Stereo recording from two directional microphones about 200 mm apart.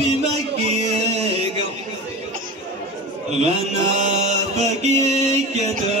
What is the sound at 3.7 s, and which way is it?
Mantra, 35° right (ahead or behind).